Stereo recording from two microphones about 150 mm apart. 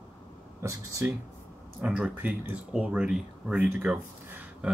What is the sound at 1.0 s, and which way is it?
Speech, 10° right (ahead or behind).